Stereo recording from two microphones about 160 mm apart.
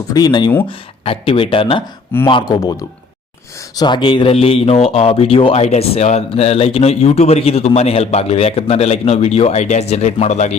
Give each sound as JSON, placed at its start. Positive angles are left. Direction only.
{"t": 0.1, "sound": "speech", "side_deg": 25}